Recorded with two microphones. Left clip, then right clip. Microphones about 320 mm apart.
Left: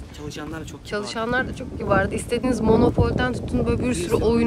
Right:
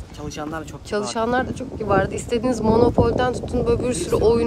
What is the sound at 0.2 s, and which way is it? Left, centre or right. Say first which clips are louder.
Speech: right 4 dB; centre.